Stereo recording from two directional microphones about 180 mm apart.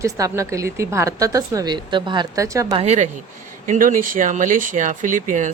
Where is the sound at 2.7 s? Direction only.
35° right (ahead or behind).